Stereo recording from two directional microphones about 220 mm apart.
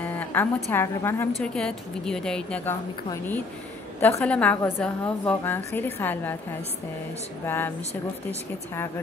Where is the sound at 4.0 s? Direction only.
10° left (ahead or behind).